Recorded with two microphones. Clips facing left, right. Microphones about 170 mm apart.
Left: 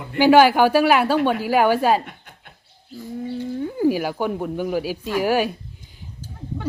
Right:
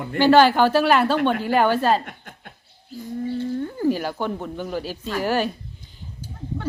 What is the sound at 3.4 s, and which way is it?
Speech, 10° left (ahead or behind).